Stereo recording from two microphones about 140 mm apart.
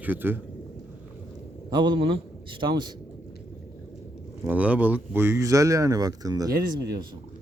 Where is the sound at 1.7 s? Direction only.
30° right (ahead or behind).